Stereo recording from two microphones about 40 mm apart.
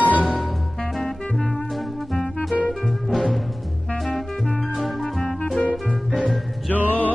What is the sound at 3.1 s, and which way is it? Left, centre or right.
Timpani, centre.